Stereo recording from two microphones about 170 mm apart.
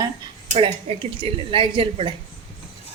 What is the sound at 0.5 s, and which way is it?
Speech, 30° right (ahead or behind).